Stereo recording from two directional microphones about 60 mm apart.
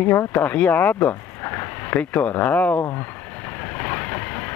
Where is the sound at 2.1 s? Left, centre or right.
Left.